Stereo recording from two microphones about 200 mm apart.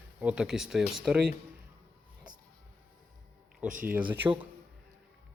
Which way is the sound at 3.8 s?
5° right (ahead or behind).